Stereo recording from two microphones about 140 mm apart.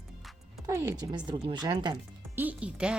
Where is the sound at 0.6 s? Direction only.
25° right (ahead or behind).